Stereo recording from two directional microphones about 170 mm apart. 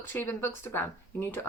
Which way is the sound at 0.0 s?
15° left (ahead or behind).